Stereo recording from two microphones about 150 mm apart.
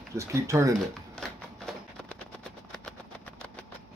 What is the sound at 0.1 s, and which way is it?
Speech, 20° right (ahead or behind).